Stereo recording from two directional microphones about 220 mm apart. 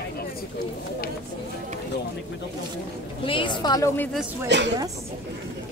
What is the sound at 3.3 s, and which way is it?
Speech, 20° left (ahead or behind).